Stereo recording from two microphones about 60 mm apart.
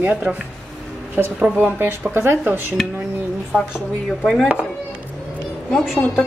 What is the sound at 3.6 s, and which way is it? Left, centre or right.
Speech, centre.